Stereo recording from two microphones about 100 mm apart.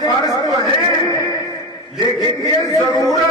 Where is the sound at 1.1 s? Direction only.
30° left (ahead or behind).